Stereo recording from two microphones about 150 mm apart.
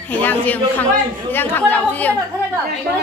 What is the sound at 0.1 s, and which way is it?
Speech, 10° left (ahead or behind).